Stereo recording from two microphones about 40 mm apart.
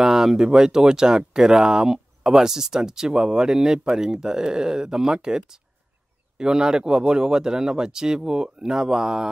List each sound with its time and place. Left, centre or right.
0.0 s speech: centre